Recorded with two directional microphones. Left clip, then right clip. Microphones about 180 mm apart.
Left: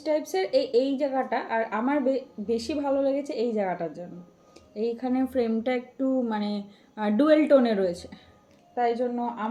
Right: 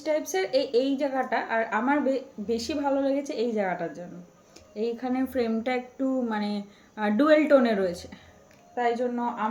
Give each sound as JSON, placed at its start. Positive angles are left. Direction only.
{"t": 0.0, "sound": "a woman's voice", "side_deg": 10}